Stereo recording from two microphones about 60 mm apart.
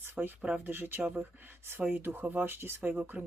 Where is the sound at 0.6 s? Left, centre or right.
Right.